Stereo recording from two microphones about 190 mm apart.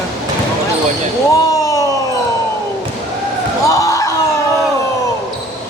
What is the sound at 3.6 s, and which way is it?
Basketball bounce, 15° left (ahead or behind).